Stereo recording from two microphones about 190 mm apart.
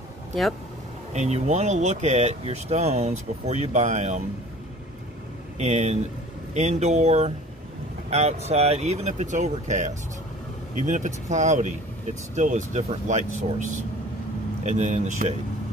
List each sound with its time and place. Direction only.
0.3 s speech: centre (ahead or behind)
1.1 s speech: 35° right (ahead or behind)
5.6 s speech: 35° right (ahead or behind)